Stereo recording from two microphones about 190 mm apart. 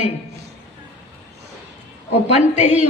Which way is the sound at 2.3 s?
35° left (ahead or behind).